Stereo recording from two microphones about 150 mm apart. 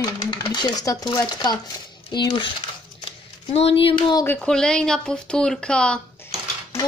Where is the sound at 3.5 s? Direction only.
40° left (ahead or behind).